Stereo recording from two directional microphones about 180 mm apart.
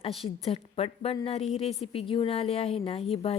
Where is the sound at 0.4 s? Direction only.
35° left (ahead or behind).